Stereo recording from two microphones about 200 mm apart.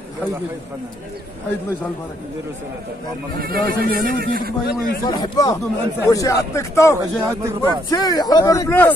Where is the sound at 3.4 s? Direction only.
45° right (ahead or behind).